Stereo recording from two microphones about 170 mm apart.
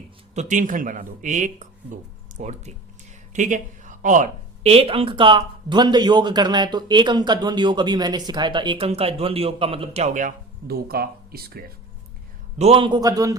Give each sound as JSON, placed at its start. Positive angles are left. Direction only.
{"t": 0.3, "sound": "speech", "side_deg": -50}
{"t": 12.5, "sound": "a man's voice", "side_deg": -35}